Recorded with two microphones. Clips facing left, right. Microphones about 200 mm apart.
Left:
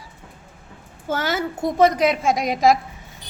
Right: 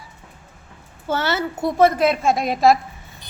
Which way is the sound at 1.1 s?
15° left (ahead or behind).